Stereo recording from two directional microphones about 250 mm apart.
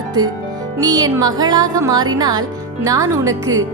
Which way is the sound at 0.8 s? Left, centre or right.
Centre.